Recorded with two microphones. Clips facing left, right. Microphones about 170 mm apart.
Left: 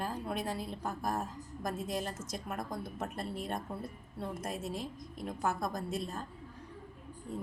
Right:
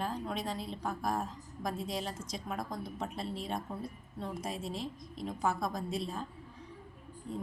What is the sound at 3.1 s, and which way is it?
Speech, 50° left (ahead or behind).